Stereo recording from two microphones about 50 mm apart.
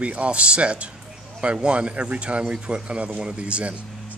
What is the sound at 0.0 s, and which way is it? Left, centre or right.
Speech, right.